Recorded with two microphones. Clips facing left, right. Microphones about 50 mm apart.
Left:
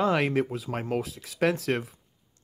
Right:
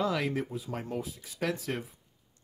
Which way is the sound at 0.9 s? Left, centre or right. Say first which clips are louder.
Left 6 dB; left.